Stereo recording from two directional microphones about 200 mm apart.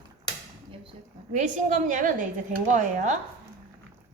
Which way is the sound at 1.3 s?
35° right (ahead or behind).